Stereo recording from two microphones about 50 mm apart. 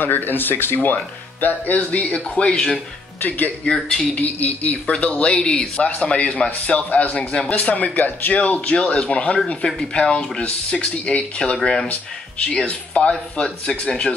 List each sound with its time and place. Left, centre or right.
0.0 s speech: left
2.1 s speech: centre
3.2 s speech: left
3.6 s speech: centre
4.1 s speech: left
8.4 s speech: left
11.5 s speech: centre
11.9 s speech: left